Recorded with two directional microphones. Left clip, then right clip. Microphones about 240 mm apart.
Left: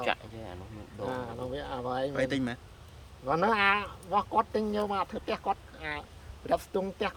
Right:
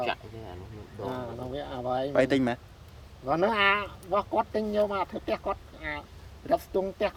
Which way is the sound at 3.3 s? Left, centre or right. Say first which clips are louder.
Right 1 dB; centre.